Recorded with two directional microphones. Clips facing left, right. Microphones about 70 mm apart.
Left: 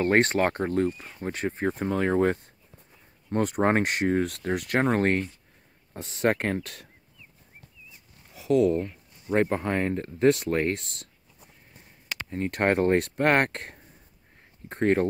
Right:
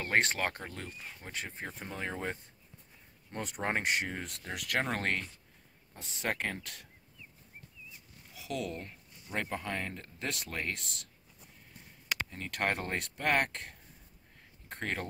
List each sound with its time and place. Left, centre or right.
0.0 s speech: left
0.8 s speech: centre
1.2 s speech: left
5.9 s speech: left
8.4 s speech: left
12.3 s speech: left
13.1 s speech: left
14.7 s speech: left